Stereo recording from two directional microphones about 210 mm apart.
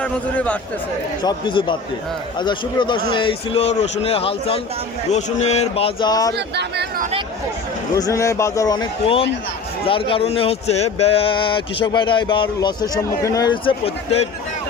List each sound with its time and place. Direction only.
0.0 s a man's voice: 5° left (ahead or behind)
1.2 s speech: 20° left (ahead or behind)
6.3 s speech: 50° right (ahead or behind)
7.9 s a man's voice: 15° left (ahead or behind)